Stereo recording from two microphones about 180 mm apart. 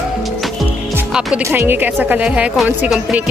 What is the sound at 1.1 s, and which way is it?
A woman's voice, 5° right (ahead or behind).